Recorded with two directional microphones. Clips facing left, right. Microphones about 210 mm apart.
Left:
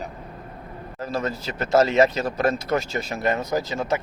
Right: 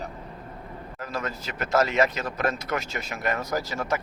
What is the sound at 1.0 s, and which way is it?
Speech, 30° left (ahead or behind).